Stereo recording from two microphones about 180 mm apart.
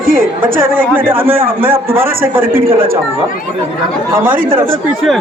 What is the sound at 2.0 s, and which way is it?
Speech, 10° right (ahead or behind).